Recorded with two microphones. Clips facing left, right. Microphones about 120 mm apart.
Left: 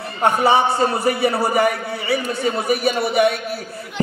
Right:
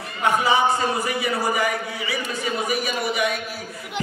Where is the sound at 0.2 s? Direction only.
60° left (ahead or behind).